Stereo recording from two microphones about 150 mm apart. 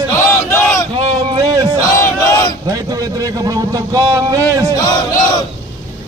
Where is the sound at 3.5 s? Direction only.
20° right (ahead or behind).